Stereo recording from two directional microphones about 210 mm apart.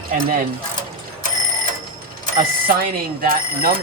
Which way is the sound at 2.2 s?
45° right (ahead or behind).